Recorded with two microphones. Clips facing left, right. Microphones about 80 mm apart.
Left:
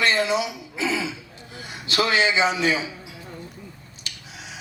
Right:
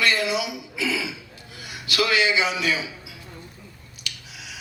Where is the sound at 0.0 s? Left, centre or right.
Left.